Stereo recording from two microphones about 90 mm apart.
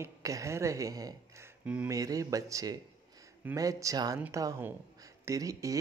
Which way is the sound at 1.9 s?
40° right (ahead or behind).